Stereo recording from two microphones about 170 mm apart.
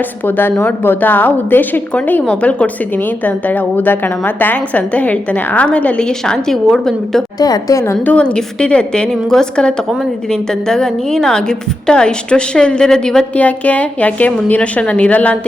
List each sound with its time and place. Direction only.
0.3 s a woman's voice: 10° left (ahead or behind)
7.3 s a woman's voice: 20° left (ahead or behind)
7.9 s a woman's voice: 5° left (ahead or behind)